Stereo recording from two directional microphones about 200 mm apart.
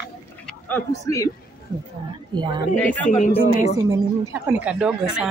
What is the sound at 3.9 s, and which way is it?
A woman's voice, 10° right (ahead or behind).